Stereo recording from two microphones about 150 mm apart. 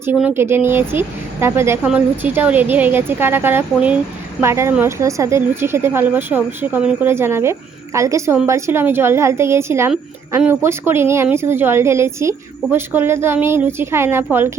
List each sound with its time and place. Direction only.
0.0 s a woman's voice: 10° right (ahead or behind)